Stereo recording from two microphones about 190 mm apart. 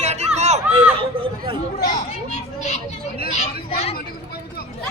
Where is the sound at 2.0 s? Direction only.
35° left (ahead or behind).